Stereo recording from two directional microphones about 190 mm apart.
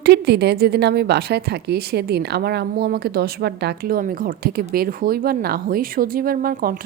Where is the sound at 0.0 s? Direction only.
60° right (ahead or behind).